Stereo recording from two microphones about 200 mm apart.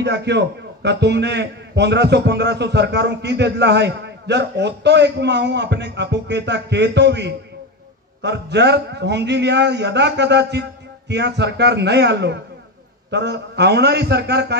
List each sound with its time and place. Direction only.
0.0 s a man's voice: 60° right (ahead or behind)